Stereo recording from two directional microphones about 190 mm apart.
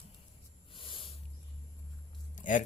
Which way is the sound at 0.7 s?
25° left (ahead or behind).